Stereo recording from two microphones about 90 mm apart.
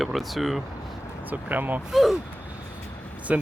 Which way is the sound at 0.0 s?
Centre (ahead or behind).